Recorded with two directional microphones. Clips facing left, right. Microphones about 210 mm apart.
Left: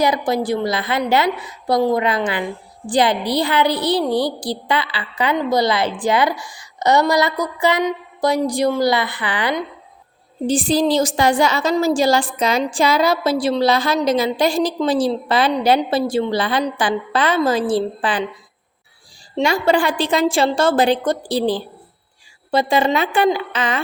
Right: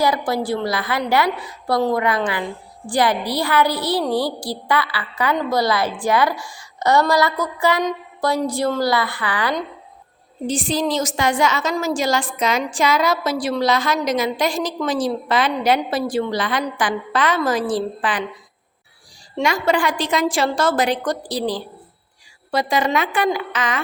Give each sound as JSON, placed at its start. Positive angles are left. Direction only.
{"t": 0.0, "sound": "a woman's voice", "side_deg": 20}
{"t": 10.4, "sound": "a woman's voice", "side_deg": 35}
{"t": 19.4, "sound": "a woman's voice", "side_deg": 30}